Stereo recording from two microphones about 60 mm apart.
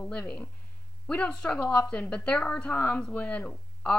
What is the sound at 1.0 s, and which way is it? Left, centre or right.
A woman's voice, centre.